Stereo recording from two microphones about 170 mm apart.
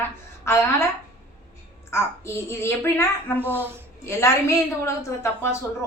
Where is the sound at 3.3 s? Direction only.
10° right (ahead or behind).